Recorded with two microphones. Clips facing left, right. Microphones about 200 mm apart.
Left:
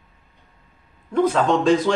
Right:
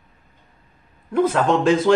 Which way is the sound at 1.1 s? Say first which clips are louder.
Even; 5° right (ahead or behind).